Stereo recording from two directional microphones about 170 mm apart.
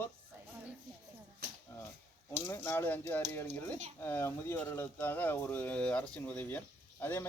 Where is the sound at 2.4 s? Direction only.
15° left (ahead or behind).